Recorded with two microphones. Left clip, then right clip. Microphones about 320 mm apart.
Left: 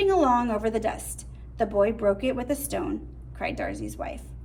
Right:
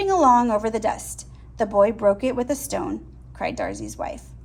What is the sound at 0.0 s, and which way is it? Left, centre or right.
A woman's voice, centre.